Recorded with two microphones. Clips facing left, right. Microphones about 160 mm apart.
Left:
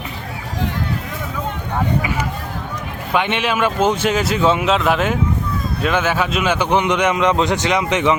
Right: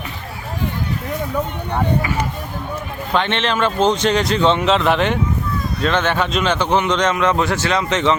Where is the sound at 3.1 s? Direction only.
10° left (ahead or behind).